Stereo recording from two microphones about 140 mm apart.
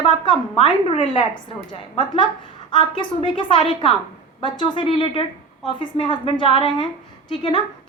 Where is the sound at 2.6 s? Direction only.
35° left (ahead or behind).